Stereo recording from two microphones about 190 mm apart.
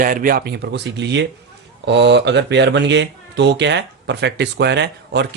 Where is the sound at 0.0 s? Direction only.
45° right (ahead or behind).